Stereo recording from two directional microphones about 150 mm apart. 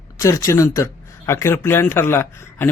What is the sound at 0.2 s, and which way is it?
Speech, 20° left (ahead or behind).